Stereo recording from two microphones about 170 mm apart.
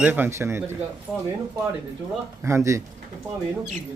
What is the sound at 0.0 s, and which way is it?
Speech, 10° right (ahead or behind).